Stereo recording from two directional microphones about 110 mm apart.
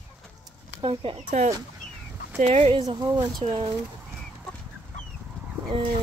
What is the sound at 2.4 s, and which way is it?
Speech, 80° right.